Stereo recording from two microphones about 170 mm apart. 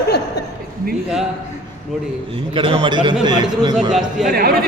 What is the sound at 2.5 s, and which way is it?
A man's voice, 30° right (ahead or behind).